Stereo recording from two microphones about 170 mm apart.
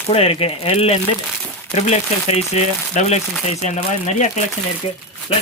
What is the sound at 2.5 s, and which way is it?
Speech, 40° left (ahead or behind).